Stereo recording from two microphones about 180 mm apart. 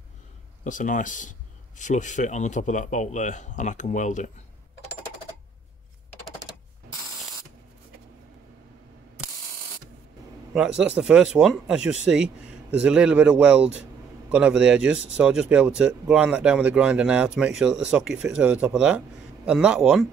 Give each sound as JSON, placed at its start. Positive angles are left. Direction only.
{"t": 0.7, "sound": "speech", "side_deg": 45}
{"t": 10.5, "sound": "a man's voice", "side_deg": -5}